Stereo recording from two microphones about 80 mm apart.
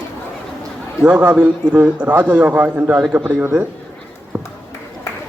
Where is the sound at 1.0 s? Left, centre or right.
Centre; by 3.6 s right.